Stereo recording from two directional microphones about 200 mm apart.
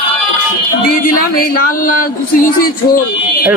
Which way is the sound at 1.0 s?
45° left (ahead or behind).